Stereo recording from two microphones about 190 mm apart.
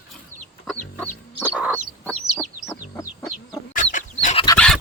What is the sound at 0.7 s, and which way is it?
Chicken, 10° left (ahead or behind).